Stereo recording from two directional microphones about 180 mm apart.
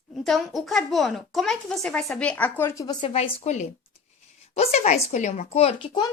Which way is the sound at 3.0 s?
35° left (ahead or behind).